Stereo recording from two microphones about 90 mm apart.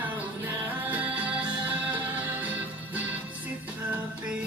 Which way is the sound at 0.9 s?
15° right (ahead or behind).